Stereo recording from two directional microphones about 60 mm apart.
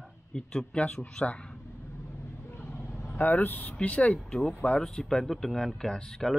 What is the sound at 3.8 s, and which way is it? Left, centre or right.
Speech, left.